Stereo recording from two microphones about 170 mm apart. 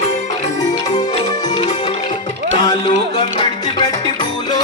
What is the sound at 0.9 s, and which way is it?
Music, 25° left (ahead or behind).